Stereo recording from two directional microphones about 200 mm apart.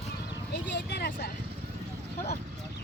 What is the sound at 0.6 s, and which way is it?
Speech, 60° left (ahead or behind).